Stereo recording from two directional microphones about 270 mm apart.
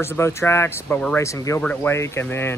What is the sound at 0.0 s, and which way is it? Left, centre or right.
Speech, centre.